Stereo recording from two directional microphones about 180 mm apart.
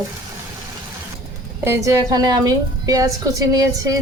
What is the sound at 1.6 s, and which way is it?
A woman's voice, 15° right (ahead or behind).